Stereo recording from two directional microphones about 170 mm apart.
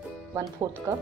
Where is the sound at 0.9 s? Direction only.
20° right (ahead or behind).